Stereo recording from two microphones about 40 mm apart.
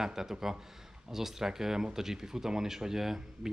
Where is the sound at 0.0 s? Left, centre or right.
Centre.